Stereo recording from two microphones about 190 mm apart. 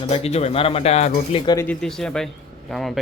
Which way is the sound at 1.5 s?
15° left (ahead or behind).